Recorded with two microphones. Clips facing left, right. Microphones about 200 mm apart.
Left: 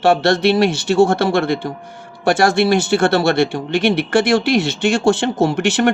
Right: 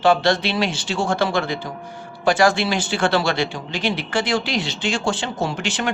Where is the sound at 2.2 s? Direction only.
65° left (ahead or behind).